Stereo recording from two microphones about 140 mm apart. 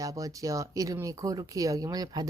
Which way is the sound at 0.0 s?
25° right (ahead or behind).